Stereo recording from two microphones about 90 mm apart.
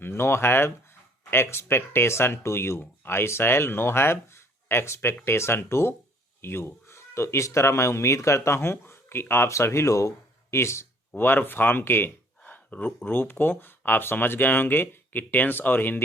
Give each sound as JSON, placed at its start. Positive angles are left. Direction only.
{"t": 0.0, "sound": "speech", "side_deg": 30}